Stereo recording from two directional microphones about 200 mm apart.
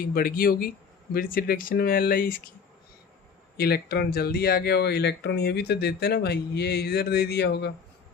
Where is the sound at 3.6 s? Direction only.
50° left (ahead or behind).